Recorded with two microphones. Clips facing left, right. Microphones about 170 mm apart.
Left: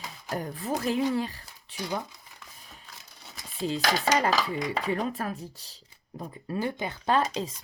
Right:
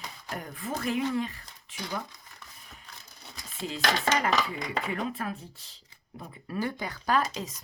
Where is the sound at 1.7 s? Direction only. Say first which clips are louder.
Left 4 dB; 35° left (ahead or behind).